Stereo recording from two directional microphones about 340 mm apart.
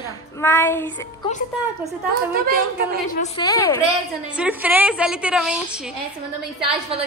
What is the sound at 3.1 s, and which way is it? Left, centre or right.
Speech, centre.